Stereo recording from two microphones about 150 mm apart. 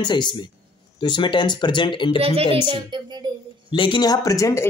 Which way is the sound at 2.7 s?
30° right (ahead or behind).